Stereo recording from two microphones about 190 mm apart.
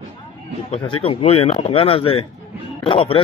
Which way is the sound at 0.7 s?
30° left (ahead or behind).